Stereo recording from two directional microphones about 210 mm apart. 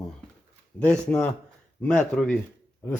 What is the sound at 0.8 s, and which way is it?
A man's voice, 5° left (ahead or behind).